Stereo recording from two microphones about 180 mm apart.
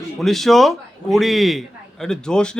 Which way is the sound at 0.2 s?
Centre (ahead or behind).